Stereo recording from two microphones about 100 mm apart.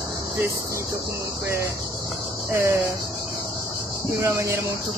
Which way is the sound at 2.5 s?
30° right (ahead or behind).